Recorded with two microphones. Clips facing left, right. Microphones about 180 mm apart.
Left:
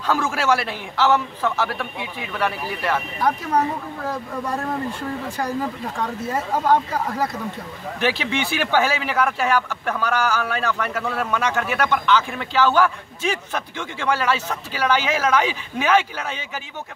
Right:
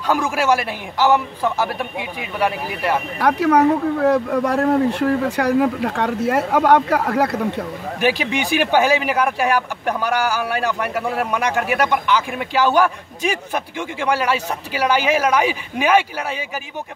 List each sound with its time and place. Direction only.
0.0 s speech: 15° right (ahead or behind)
3.2 s speech: 70° right (ahead or behind)
8.0 s speech: 15° right (ahead or behind)